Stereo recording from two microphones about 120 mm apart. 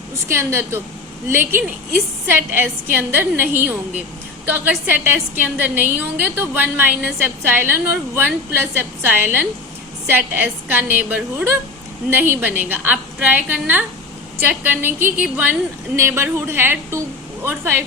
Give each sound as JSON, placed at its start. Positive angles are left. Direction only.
{"t": 0.3, "sound": "a woman's voice", "side_deg": -20}